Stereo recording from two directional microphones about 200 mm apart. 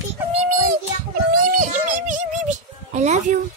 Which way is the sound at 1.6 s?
40° right (ahead or behind).